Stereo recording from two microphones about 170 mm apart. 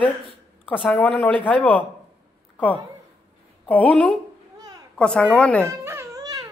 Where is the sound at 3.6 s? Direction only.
10° left (ahead or behind).